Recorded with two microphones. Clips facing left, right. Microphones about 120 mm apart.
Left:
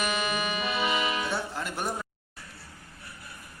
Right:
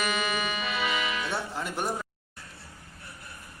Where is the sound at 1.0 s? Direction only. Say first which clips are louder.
Left 2 dB; 30° left (ahead or behind).